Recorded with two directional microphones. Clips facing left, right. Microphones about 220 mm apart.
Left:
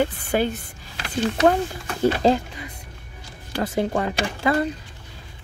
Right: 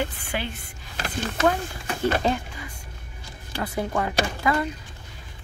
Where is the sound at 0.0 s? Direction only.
40° left (ahead or behind).